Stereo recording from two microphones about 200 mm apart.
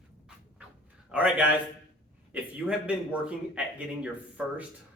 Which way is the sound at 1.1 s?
5° right (ahead or behind).